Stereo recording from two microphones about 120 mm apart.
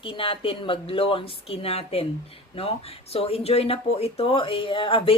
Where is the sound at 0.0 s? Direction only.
45° left (ahead or behind).